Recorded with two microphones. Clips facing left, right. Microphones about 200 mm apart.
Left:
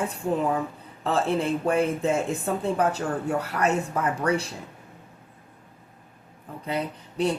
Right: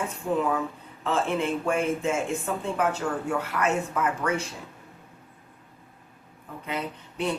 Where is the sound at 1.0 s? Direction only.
35° left (ahead or behind).